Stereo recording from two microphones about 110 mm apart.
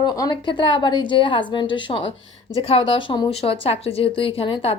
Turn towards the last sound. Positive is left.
turn(degrees=60)  # may be behind; listen again after turning